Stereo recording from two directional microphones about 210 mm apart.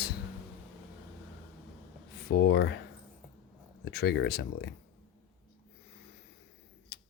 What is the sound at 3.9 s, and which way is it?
Speech, 50° left (ahead or behind).